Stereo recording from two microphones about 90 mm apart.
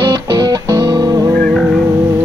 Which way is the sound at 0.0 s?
50° right (ahead or behind).